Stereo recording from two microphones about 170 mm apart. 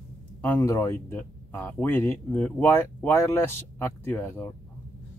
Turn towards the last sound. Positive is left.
turn(degrees=15)  # may be behind; listen again after turning